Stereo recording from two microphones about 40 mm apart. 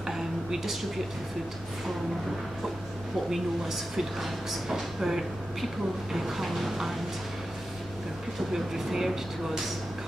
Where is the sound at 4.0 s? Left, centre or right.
Centre.